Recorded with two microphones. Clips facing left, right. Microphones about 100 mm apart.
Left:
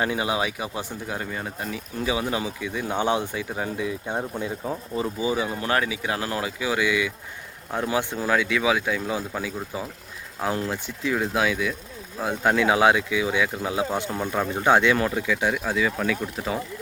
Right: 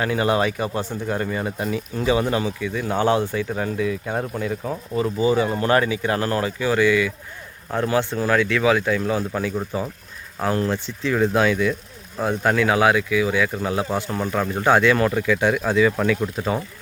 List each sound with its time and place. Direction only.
0.2 s speech: 5° left (ahead or behind); by 4.8 s 30° left (ahead or behind)
5.0 s speech: 10° left (ahead or behind)
12.4 s speech: 15° left (ahead or behind)
13.6 s speech: 10° left (ahead or behind)